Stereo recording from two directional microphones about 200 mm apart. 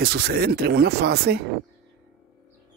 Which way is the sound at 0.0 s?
55° right (ahead or behind).